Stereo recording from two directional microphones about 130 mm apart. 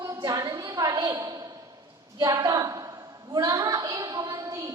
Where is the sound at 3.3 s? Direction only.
30° right (ahead or behind).